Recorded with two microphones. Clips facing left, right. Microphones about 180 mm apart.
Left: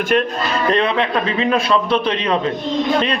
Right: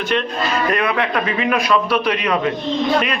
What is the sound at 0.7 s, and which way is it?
A man's voice, 25° left (ahead or behind).